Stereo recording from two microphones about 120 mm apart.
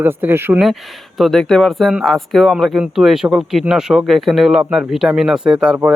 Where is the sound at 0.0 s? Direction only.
15° right (ahead or behind).